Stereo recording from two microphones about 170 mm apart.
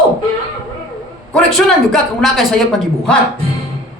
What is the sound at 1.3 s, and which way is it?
Speech, centre (ahead or behind).